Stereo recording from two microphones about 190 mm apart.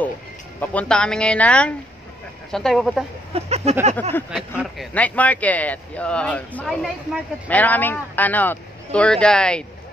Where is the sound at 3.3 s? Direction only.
35° right (ahead or behind).